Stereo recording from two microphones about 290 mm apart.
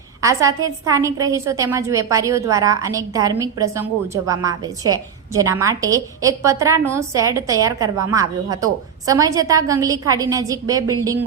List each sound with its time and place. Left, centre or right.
0.2 s a woman's voice: centre